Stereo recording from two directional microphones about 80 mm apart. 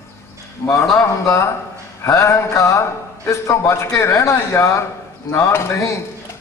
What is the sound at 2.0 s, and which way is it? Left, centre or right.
A man's voice, left.